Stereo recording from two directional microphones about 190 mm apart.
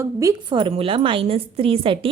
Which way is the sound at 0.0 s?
15° right (ahead or behind).